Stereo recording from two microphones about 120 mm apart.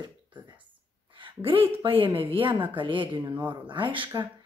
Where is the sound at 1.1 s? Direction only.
45° right (ahead or behind).